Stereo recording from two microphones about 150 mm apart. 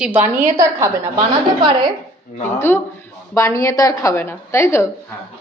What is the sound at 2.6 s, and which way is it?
Speech, 15° left (ahead or behind).